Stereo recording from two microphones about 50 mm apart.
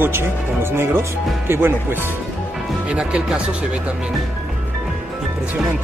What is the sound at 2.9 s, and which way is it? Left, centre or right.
Speech, centre.